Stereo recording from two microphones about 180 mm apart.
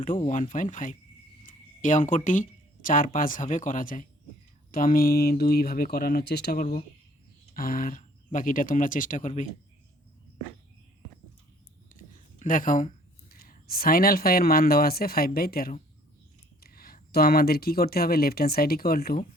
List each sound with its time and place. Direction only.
0.2 s speech: 45° left (ahead or behind)
11.9 s speech: 45° left (ahead or behind)